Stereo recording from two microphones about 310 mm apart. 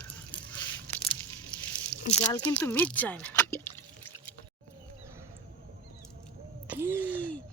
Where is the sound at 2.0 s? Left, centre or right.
Centre.